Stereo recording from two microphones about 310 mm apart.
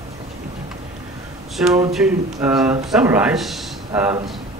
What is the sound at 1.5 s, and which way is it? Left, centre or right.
Speech, centre.